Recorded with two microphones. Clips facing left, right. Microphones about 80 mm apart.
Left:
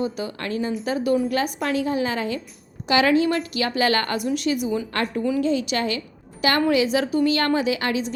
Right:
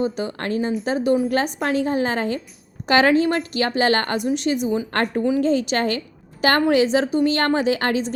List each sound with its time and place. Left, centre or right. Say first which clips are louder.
0.0 s a woman's voice: right 3 dB; right
4.9 s a woman's voice: right 3 dB; right
7.3 s a woman's voice: right 2 dB; right